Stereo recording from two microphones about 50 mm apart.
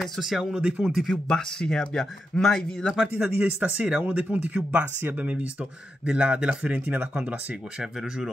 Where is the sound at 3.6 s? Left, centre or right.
Right.